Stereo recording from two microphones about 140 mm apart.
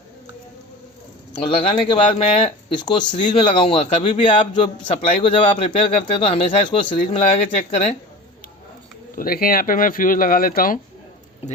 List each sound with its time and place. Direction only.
1.3 s a man's voice: 35° left (ahead or behind)
9.1 s speech: 90° left